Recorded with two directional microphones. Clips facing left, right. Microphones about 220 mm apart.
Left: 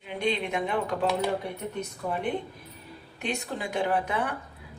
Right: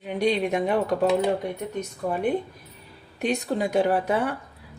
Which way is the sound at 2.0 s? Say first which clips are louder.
Right 4 dB; 45° right (ahead or behind).